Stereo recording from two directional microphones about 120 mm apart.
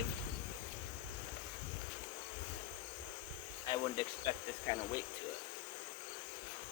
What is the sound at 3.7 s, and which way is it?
Speech, 35° left (ahead or behind).